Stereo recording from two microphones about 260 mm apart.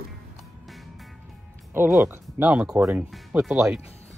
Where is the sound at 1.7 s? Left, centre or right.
Centre.